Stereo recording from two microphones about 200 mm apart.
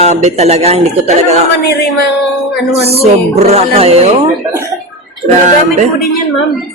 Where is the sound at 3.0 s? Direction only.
30° right (ahead or behind).